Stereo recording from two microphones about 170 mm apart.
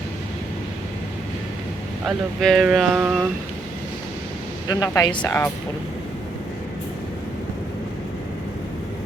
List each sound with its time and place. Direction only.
2.0 s speech: centre (ahead or behind)
4.7 s speech: 20° left (ahead or behind)